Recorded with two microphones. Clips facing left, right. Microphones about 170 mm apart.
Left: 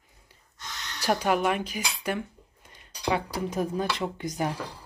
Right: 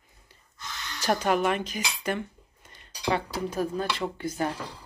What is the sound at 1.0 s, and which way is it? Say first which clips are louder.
Speech: even; 5° left (ahead or behind).